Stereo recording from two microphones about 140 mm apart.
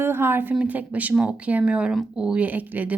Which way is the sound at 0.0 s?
15° right (ahead or behind).